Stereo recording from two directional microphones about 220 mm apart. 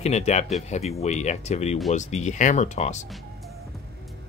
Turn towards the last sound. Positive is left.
turn(degrees=30)  # may be behind; listen again after turning